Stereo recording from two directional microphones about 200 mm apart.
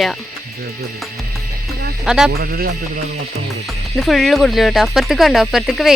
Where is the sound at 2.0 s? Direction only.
5° right (ahead or behind).